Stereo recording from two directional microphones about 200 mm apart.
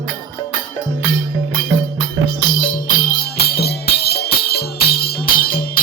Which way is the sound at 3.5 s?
55° left (ahead or behind).